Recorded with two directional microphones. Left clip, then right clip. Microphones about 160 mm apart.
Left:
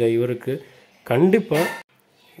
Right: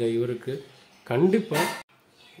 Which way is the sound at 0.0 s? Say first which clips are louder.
Left 6 dB; 30° left (ahead or behind).